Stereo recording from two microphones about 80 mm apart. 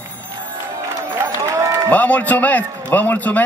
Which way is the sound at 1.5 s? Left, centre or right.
Right.